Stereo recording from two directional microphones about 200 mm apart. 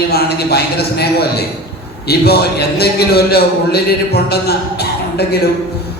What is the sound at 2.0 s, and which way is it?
A man's voice, 50° left (ahead or behind).